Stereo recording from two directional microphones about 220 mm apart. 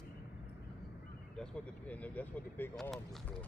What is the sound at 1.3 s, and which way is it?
Speech, 5° left (ahead or behind).